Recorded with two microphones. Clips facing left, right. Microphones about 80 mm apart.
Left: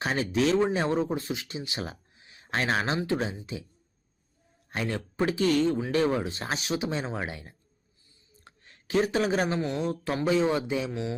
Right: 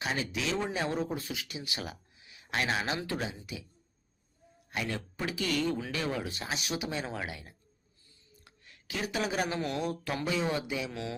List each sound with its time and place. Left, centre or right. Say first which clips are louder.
0.0 s speech: left 8 dB; left
3.0 s speech: left 6 dB; left
4.7 s a man's voice: left 4 dB; left
8.3 s a sound: left 3 dB; left
9.6 s speech: left 4 dB; left